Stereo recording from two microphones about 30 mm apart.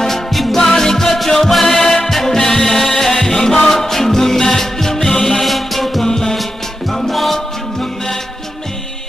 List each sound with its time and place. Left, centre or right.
0.3 s music: centre
0.6 s music: centre
6.0 s music: centre